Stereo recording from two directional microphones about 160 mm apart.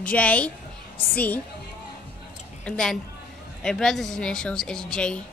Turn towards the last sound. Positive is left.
turn(degrees=5)  # may be behind; listen again after turning